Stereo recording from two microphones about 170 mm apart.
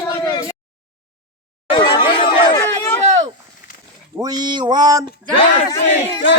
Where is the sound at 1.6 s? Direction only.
30° left (ahead or behind).